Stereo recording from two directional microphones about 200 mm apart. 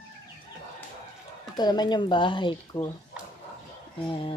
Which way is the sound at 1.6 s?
20° left (ahead or behind).